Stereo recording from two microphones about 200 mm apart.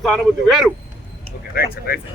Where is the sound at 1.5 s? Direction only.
50° left (ahead or behind).